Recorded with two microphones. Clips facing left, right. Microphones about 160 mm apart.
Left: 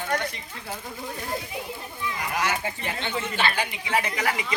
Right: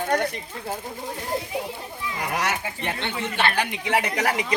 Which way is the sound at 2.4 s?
70° right (ahead or behind).